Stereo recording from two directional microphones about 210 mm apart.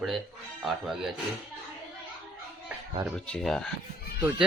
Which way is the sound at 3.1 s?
5° left (ahead or behind).